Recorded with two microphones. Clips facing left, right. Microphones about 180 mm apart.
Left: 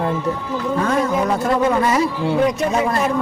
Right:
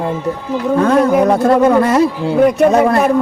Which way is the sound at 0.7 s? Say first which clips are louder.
Right 8 dB; 60° right (ahead or behind).